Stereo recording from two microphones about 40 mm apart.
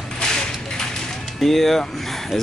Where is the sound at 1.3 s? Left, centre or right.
Centre.